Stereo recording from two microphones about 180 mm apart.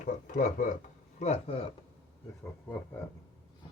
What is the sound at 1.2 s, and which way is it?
Speech, 35° left (ahead or behind).